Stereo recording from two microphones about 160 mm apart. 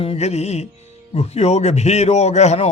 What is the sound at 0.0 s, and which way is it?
Music, 40° left (ahead or behind).